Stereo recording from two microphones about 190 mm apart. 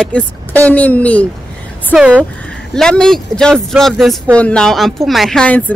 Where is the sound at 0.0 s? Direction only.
5° left (ahead or behind).